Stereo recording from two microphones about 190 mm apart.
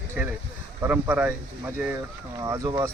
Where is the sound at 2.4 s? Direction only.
20° right (ahead or behind).